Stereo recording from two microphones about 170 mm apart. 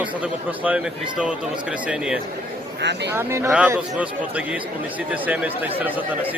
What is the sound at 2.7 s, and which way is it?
Speech, 85° right.